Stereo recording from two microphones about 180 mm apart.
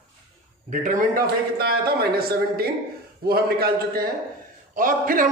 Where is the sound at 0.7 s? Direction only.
50° right (ahead or behind).